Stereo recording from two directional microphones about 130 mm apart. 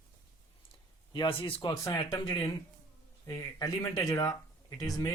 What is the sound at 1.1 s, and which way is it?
Speech, 40° left (ahead or behind).